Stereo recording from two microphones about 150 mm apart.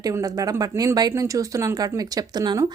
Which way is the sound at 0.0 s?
25° right (ahead or behind).